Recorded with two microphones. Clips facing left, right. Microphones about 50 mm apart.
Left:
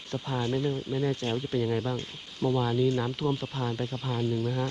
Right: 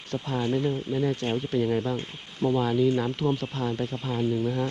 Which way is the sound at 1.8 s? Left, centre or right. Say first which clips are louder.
Right 3 dB; centre.